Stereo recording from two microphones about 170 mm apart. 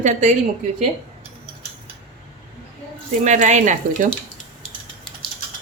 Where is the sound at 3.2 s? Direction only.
45° right (ahead or behind).